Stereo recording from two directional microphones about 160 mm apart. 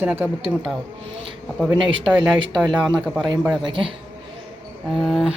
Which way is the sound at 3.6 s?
30° right (ahead or behind).